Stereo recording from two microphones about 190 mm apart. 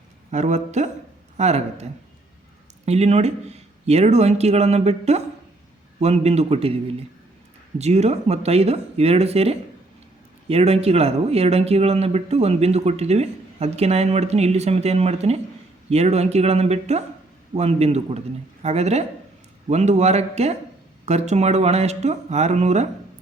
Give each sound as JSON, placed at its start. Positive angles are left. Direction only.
{"t": 0.3, "sound": "speech", "side_deg": -40}
{"t": 7.8, "sound": "speech", "side_deg": -35}